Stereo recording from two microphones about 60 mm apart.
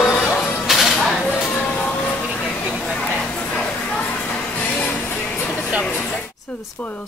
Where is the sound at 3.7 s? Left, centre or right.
Left.